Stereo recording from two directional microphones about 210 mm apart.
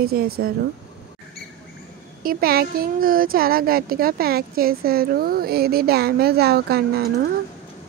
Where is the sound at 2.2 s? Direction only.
45° right (ahead or behind).